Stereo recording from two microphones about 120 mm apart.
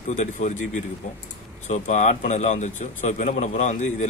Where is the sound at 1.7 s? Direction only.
80° left.